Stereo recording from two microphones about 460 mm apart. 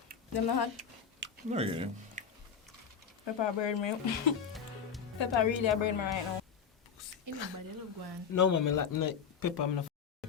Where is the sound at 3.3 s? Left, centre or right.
Left.